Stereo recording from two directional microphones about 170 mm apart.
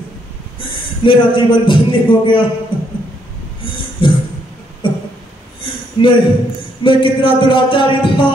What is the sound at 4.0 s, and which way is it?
Music, 30° left (ahead or behind).